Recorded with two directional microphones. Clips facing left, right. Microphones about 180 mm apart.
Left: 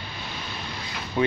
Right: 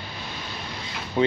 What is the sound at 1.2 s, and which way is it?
Speech, 25° right (ahead or behind).